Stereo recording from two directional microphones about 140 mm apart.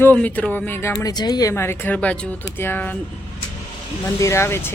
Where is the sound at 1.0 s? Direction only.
30° left (ahead or behind); by 3.0 s 15° left (ahead or behind).